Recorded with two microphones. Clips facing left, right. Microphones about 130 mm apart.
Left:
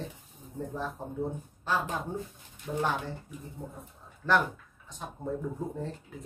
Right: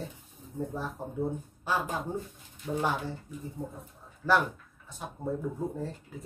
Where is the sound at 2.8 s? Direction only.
10° right (ahead or behind).